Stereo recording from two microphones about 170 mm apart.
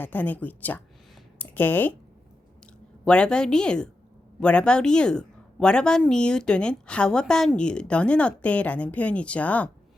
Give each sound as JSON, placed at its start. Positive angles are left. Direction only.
{"t": 0.0, "sound": "a woman's voice", "side_deg": 10}
{"t": 3.0, "sound": "a woman's voice", "side_deg": 5}